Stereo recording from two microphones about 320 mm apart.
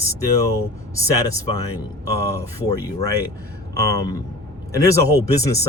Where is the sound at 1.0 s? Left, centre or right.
Centre.